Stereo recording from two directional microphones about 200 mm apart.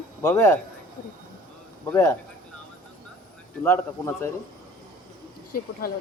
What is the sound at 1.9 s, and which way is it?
Speech, 15° left (ahead or behind).